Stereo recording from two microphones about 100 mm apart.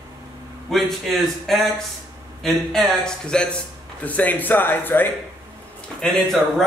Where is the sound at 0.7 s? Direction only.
Centre (ahead or behind); by 5.0 s 20° left (ahead or behind).